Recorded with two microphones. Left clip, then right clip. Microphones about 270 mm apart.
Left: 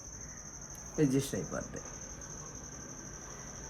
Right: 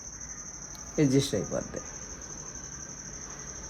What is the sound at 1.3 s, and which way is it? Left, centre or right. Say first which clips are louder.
Speech: right 7 dB; right.